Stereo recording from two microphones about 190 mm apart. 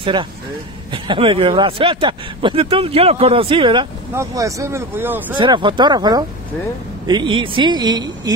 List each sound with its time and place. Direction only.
0.0 s speech: 25° right (ahead or behind)
4.1 s speech: 15° right (ahead or behind)
5.4 s speech: 25° right (ahead or behind)